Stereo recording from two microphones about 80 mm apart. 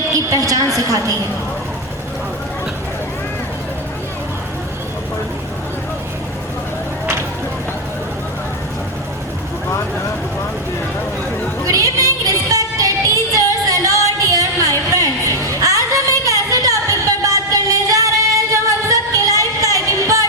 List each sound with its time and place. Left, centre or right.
0.2 s a woman's voice: right
11.7 s music: right
14.2 s a sound: right
18.5 s music: right